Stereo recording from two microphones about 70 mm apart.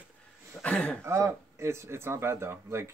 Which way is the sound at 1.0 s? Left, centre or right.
Right.